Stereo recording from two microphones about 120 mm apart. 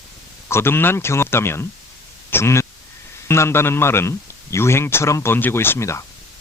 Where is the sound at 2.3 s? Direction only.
20° left (ahead or behind).